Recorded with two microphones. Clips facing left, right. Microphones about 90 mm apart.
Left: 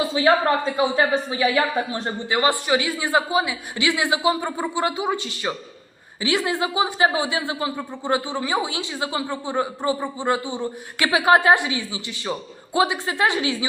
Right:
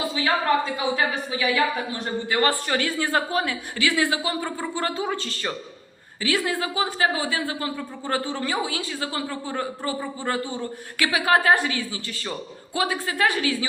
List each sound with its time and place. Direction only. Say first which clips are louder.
0.1 s a woman's voice: left 3 dB; 30° left (ahead or behind)
2.4 s a woman's voice: left 3 dB; 15° left (ahead or behind)